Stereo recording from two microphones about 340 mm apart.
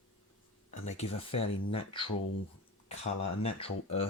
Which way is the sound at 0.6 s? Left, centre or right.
Centre.